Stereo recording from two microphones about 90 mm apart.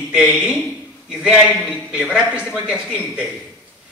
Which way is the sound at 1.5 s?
5° left (ahead or behind).